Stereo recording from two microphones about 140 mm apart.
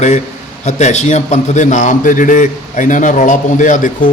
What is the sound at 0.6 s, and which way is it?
A man's voice, 55° left (ahead or behind).